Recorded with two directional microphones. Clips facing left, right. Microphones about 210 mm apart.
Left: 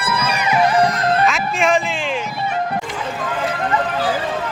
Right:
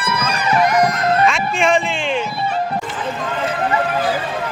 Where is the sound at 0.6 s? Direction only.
30° left (ahead or behind).